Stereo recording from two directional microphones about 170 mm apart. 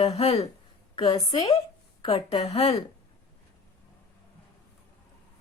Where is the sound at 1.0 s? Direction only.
25° left (ahead or behind).